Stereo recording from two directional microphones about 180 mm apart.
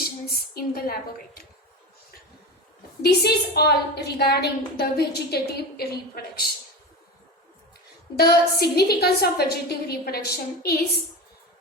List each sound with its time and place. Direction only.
0.3 s a woman's voice: 60° left (ahead or behind)
3.0 s a woman's voice: 65° left (ahead or behind)
8.1 s a woman's voice: 60° left (ahead or behind)